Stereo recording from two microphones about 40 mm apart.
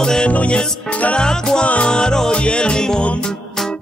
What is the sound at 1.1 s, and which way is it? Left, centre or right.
Music, centre.